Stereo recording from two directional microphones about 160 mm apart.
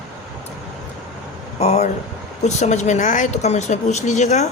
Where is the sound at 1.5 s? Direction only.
45° left (ahead or behind).